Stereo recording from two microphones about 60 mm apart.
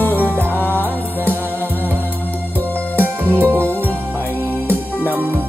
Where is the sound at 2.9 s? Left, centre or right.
Right.